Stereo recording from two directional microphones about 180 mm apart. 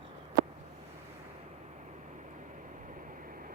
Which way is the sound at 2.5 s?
45° right (ahead or behind).